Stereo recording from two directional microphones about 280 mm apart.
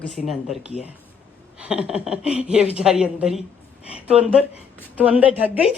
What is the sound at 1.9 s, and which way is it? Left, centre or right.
Speech, centre.